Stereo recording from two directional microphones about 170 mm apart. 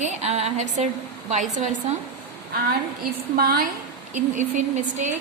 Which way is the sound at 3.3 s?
60° right (ahead or behind).